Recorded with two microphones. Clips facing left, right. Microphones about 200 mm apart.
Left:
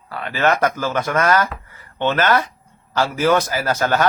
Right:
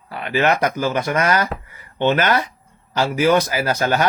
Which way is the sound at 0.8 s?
15° right (ahead or behind).